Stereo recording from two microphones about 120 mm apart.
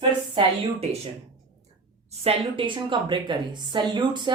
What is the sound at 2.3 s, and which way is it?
Speech, 45° right (ahead or behind).